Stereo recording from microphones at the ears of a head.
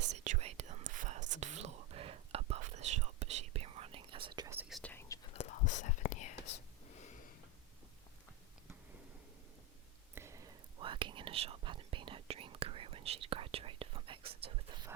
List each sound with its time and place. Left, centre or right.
0.0 s whispering: right
5.2 s whispering: left
10.2 s whispering: right